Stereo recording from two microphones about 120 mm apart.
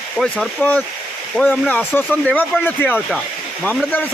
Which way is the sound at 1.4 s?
5° left (ahead or behind).